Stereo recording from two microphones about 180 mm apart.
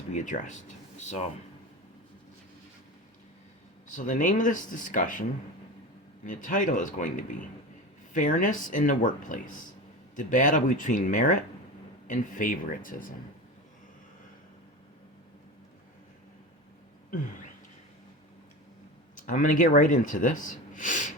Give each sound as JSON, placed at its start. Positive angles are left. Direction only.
{"t": 0.1, "sound": "speech", "side_deg": 45}
{"t": 3.8, "sound": "speech", "side_deg": 45}
{"t": 6.2, "sound": "speech", "side_deg": 45}
{"t": 19.1, "sound": "speech", "side_deg": 45}